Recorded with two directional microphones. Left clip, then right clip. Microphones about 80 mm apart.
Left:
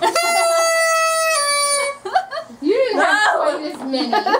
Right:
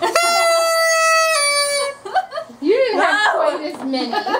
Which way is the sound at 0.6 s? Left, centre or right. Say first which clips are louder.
Right 1 dB; right.